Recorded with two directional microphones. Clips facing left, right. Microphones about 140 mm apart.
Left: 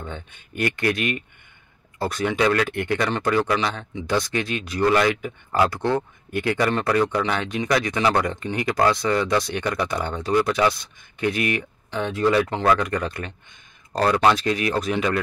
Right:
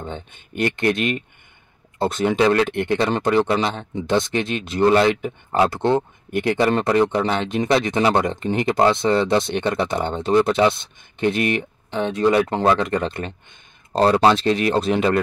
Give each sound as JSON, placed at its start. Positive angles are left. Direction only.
{"t": 0.0, "sound": "speech", "side_deg": -20}